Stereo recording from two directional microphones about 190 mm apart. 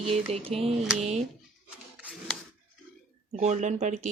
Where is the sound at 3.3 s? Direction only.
35° right (ahead or behind).